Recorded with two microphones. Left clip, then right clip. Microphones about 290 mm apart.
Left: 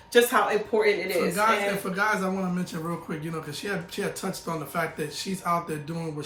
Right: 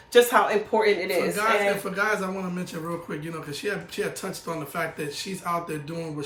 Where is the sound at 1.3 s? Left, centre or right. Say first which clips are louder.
Right 1 dB; centre.